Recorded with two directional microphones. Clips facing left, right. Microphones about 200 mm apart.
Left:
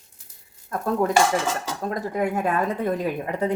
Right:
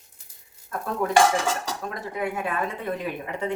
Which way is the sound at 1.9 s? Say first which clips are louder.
Left 6 dB; 40° left (ahead or behind).